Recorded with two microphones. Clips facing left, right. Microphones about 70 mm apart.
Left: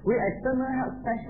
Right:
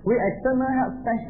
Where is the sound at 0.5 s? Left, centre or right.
Centre.